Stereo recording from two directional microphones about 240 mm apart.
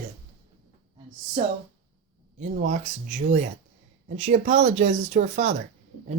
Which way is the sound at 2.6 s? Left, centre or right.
Right.